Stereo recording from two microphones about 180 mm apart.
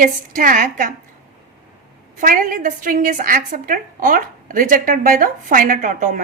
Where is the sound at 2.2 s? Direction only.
50° right (ahead or behind).